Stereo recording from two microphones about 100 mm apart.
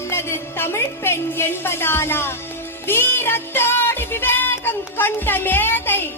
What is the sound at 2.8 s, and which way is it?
Music, 20° left (ahead or behind).